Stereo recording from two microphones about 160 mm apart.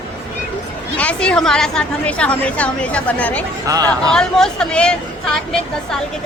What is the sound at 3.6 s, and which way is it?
Speech, 20° right (ahead or behind).